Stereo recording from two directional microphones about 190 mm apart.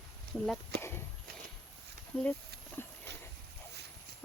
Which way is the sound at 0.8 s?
10° left (ahead or behind).